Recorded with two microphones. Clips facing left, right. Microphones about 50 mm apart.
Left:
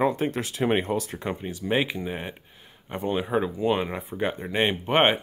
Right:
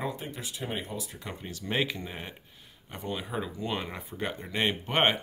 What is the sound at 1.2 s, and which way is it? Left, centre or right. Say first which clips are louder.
Speech: left 9 dB; left.